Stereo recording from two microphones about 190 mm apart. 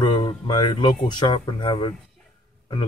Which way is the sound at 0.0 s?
25° left (ahead or behind).